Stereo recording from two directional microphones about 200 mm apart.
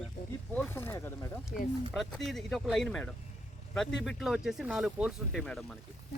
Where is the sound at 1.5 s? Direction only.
45° left (ahead or behind).